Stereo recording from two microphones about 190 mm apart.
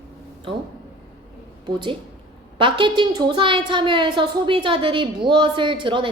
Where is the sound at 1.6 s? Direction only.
25° right (ahead or behind).